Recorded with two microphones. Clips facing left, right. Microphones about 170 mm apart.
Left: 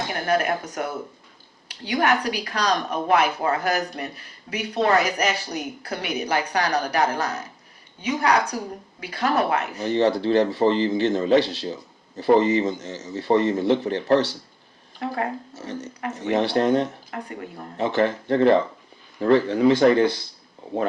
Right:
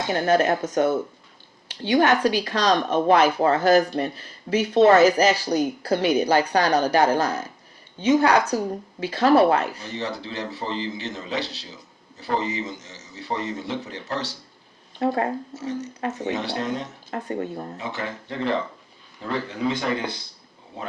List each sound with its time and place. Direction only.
0.1 s speech: 25° right (ahead or behind)
9.8 s a man's voice: 60° left (ahead or behind)
14.9 s speech: 30° right (ahead or behind)
16.3 s a man's voice: 55° left (ahead or behind)
17.1 s speech: 25° right (ahead or behind)
17.7 s a man's voice: 55° left (ahead or behind)